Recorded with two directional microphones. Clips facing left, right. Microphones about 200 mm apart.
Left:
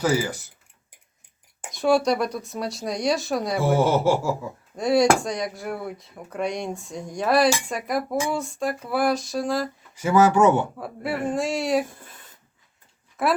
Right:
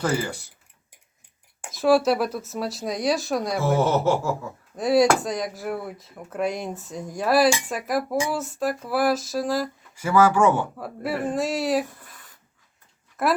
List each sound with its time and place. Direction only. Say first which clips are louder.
0.0 s speech: left 2 dB; 5° left (ahead or behind)
1.7 s speech: right 1 dB; centre (ahead or behind)
3.6 s speech: left 2 dB; 10° left (ahead or behind)
4.8 s speech: even; centre (ahead or behind)
10.0 s speech: left 1 dB; 20° left (ahead or behind)
10.8 s speech: even; centre (ahead or behind)
11.9 s speech: left 2 dB; 25° left (ahead or behind)
13.2 s speech: even; centre (ahead or behind)